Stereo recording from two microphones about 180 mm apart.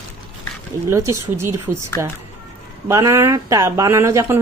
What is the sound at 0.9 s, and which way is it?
Speech, 15° right (ahead or behind).